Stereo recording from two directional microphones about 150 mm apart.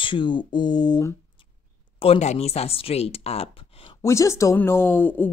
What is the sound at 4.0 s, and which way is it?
Speech, 20° left (ahead or behind).